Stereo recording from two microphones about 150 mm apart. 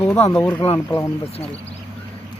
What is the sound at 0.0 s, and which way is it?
Speech, 15° left (ahead or behind).